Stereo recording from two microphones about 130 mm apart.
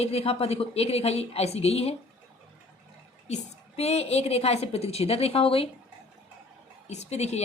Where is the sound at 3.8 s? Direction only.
55° left (ahead or behind).